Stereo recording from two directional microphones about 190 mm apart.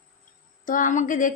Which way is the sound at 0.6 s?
45° left (ahead or behind).